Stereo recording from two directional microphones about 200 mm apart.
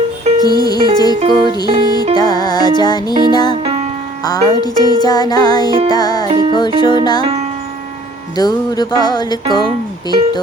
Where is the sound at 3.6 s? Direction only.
30° right (ahead or behind).